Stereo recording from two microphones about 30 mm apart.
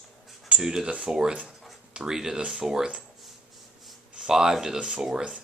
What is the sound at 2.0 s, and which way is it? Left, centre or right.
Speech, right.